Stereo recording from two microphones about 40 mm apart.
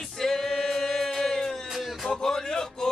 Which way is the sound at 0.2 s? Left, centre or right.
Centre.